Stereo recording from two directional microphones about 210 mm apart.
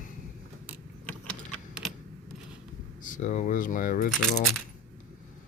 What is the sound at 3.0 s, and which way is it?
Speech, 35° left (ahead or behind).